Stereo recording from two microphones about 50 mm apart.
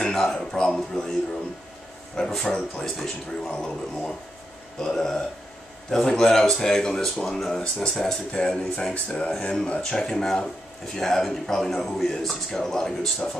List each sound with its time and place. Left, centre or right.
0.0 s speech: centre
2.1 s speech: centre
3.5 s speech: left
4.7 s speech: centre; by 9.3 s left
9.5 s speech: centre